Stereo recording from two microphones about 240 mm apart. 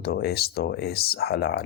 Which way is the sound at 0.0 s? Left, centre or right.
Left.